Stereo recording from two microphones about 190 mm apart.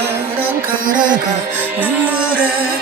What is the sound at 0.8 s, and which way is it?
Music, 45° right (ahead or behind).